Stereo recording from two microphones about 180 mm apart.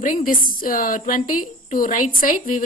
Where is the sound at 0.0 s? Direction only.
50° left (ahead or behind).